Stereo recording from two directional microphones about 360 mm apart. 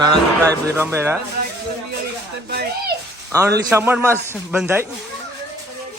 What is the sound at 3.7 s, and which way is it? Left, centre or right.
Speech, centre.